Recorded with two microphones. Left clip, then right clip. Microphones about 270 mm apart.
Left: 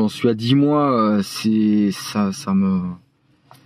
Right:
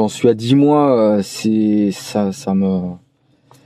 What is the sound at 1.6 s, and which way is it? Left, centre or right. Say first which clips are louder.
Speech: right 3 dB; right.